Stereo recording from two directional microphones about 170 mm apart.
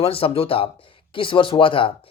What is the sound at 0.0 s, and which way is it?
Speech, 35° left (ahead or behind).